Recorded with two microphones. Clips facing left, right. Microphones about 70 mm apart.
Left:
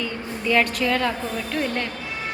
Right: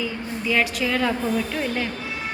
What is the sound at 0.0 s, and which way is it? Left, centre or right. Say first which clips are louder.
A woman's voice: even; centre.